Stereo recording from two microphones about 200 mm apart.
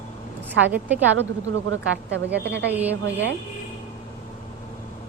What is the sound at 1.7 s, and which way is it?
A woman's voice, 60° right (ahead or behind).